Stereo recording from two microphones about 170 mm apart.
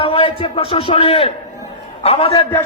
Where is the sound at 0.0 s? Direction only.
35° left (ahead or behind).